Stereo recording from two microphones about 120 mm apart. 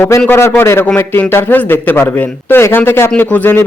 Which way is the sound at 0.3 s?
20° left (ahead or behind).